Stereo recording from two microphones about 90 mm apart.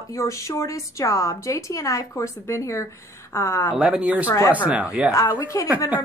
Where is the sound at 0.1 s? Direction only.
35° left (ahead or behind).